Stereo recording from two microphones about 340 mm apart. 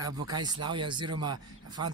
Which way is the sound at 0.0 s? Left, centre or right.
Centre.